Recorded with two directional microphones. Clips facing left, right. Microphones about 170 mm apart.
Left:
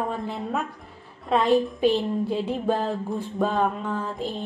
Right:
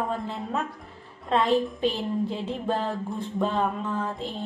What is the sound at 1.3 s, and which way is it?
A woman's voice, 15° left (ahead or behind).